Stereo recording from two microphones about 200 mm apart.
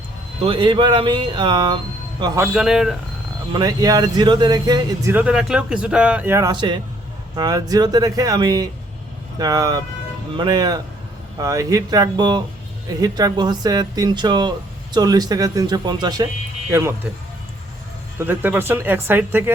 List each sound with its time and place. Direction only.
0.4 s speech: 25° right (ahead or behind)
2.5 s speech: 5° right (ahead or behind)
3.5 s speech: 20° right (ahead or behind)
5.1 s speech: 5° right (ahead or behind); by 16.2 s 20° right (ahead or behind)
18.2 s speech: 10° right (ahead or behind)